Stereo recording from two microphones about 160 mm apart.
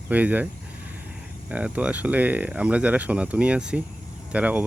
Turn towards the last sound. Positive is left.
turn(degrees=-10)  # may be behind; listen again after turning